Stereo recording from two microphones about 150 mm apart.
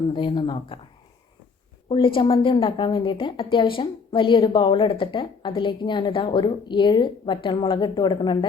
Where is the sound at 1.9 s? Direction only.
35° left (ahead or behind).